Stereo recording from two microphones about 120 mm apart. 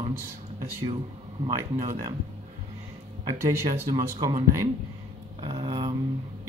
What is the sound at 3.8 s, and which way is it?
Speech, 35° right (ahead or behind).